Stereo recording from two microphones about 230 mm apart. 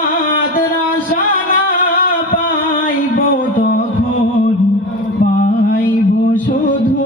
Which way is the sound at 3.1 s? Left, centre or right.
Left.